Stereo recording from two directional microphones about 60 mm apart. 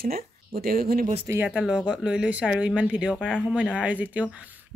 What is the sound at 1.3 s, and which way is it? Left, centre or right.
Speech, right.